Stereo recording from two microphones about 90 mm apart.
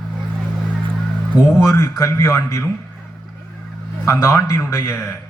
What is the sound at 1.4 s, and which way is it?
A man's voice, 35° left (ahead or behind).